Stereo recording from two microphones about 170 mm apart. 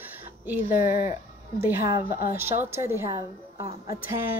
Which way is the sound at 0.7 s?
45° left (ahead or behind).